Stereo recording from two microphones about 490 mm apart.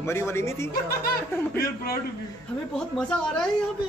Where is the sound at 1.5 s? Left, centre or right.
Centre.